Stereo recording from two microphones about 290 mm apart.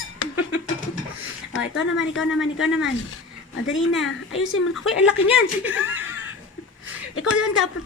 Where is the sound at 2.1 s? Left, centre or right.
Centre.